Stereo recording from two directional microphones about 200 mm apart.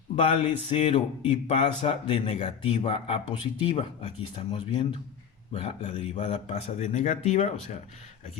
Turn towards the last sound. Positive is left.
turn(degrees=35)  # may be behind; listen again after turning